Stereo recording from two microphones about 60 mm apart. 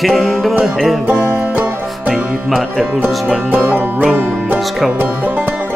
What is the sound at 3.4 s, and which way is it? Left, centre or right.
Music, right.